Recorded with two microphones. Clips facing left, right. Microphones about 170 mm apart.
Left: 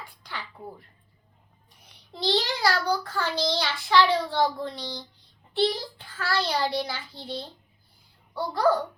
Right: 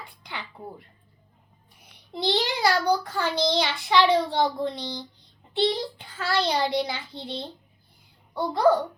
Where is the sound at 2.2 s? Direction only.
15° right (ahead or behind).